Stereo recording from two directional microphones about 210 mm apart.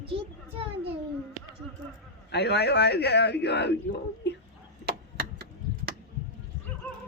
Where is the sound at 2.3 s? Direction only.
50° left (ahead or behind).